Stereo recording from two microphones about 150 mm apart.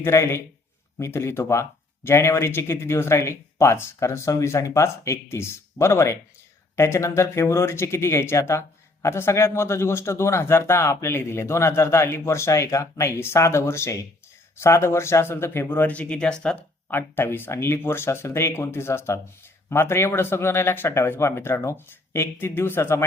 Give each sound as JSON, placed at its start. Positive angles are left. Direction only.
{"t": 0.0, "sound": "speech", "side_deg": 15}